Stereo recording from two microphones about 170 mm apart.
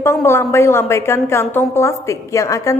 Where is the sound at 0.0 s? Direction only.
15° left (ahead or behind).